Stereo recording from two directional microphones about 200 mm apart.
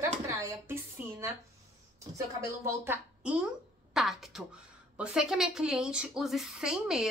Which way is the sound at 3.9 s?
Centre (ahead or behind).